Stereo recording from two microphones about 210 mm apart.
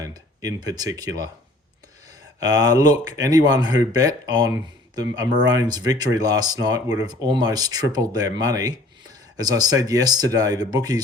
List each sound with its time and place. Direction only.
0.0 s speech: 20° right (ahead or behind)
2.4 s speech: 15° right (ahead or behind)